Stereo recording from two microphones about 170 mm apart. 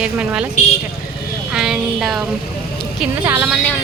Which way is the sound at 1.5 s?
5° right (ahead or behind).